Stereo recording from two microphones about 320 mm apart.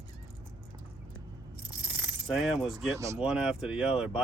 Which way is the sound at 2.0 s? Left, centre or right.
Centre.